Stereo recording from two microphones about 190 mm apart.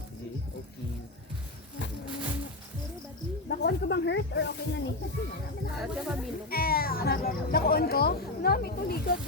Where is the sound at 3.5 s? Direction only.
60° left (ahead or behind).